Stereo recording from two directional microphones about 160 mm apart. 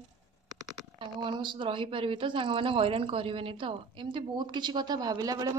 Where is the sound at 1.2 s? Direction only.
30° right (ahead or behind).